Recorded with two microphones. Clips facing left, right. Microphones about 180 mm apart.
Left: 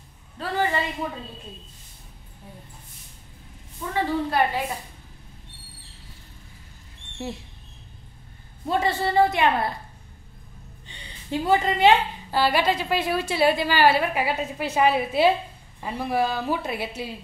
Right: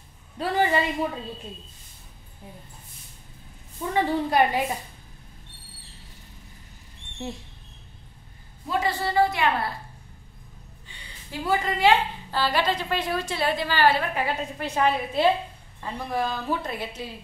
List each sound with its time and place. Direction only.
0.4 s speech: 15° right (ahead or behind)
3.9 s a woman's voice: 15° right (ahead or behind)
7.2 s a woman's voice: 5° left (ahead or behind)
8.6 s a woman's voice: 25° left (ahead or behind)
10.9 s a woman's voice: 25° left (ahead or behind)